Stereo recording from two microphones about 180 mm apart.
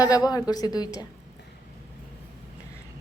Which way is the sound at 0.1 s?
20° left (ahead or behind).